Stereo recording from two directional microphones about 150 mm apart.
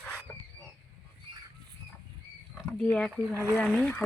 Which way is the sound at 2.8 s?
5° left (ahead or behind).